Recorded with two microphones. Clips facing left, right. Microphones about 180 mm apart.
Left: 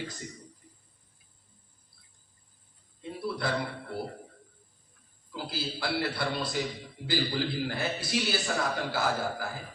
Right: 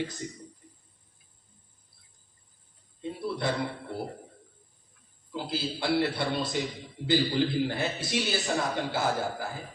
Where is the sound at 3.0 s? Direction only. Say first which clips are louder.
Right 2 dB; 20° right (ahead or behind).